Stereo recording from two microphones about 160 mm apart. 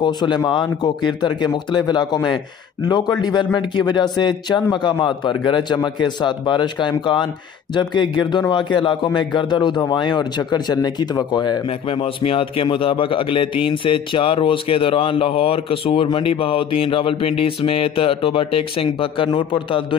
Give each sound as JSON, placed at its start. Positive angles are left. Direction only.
{"t": 0.0, "sound": "a man's voice", "side_deg": 30}